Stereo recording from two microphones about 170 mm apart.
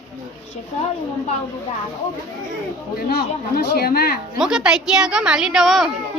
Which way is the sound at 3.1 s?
65° left (ahead or behind).